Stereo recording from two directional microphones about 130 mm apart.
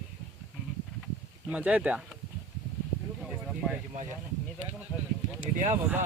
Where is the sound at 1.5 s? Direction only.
10° right (ahead or behind).